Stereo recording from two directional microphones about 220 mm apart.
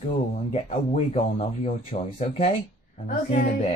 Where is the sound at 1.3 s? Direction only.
30° left (ahead or behind).